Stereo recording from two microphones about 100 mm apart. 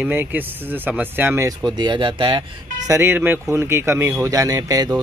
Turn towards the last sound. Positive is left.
turn(degrees=-35)  # may be behind; listen again after turning